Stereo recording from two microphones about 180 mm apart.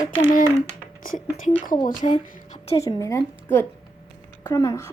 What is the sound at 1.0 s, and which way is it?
A woman's voice, 50° left (ahead or behind).